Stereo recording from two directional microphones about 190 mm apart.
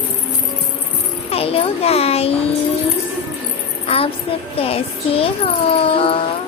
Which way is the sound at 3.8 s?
30° left (ahead or behind).